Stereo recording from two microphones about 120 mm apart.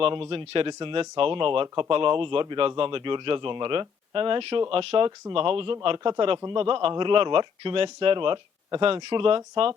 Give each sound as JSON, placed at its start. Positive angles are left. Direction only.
{"t": 0.0, "sound": "a man's voice", "side_deg": -50}